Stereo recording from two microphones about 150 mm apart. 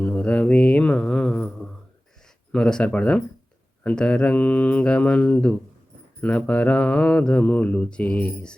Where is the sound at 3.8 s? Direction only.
5° left (ahead or behind).